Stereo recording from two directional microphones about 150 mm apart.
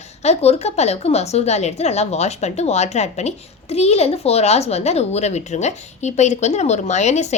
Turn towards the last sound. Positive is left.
turn(degrees=50)  # may be behind; listen again after turning